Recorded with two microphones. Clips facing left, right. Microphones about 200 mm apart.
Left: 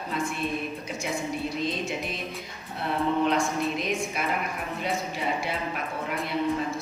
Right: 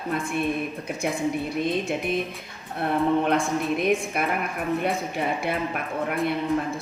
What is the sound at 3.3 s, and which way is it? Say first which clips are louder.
A woman's voice: right 2 dB; 55° right (ahead or behind).